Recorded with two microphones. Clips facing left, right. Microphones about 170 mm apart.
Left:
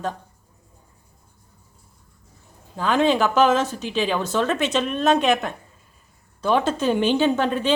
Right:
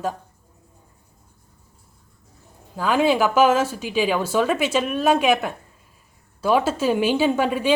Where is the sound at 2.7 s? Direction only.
5° right (ahead or behind).